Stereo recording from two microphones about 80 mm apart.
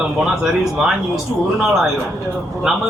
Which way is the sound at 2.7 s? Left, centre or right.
Centre.